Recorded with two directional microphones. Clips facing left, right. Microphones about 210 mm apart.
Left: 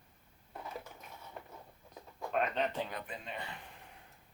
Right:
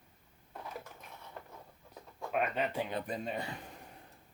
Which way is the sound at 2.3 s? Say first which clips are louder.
Even; 5° right (ahead or behind).